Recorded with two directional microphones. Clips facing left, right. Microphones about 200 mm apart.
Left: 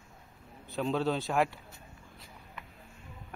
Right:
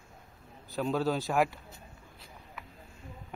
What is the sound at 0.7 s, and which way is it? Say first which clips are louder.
Speech: even; centre (ahead or behind).